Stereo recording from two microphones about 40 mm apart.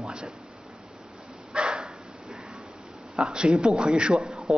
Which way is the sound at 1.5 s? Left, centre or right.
Right.